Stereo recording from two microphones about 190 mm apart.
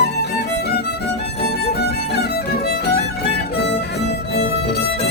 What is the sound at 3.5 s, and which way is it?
Music, 65° left (ahead or behind).